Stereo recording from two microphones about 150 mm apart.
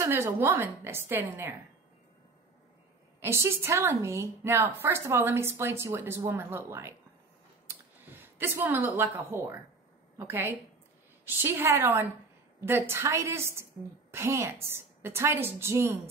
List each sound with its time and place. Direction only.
0.0 s a woman's voice: 15° right (ahead or behind)
3.2 s a woman's voice: 15° right (ahead or behind)
7.6 s a sound: 15° right (ahead or behind)
10.1 s a woman's voice: 15° right (ahead or behind)